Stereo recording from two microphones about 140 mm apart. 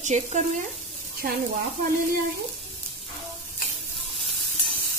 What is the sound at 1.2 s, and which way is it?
Speech, 90° right.